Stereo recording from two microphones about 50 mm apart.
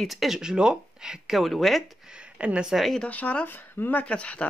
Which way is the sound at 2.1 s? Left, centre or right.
Right.